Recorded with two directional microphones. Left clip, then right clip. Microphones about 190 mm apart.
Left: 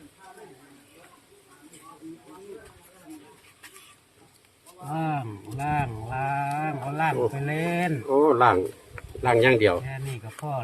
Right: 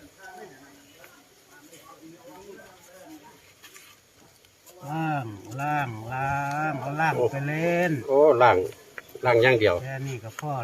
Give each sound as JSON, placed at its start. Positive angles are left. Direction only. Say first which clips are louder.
{"t": 4.9, "sound": "sheep", "louder": "even", "side_deg": 0}
{"t": 8.1, "sound": "speech", "louder": "right 2 dB", "side_deg": 25}